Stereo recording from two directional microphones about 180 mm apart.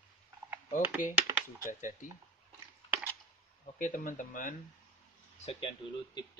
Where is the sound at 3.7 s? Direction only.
50° left (ahead or behind).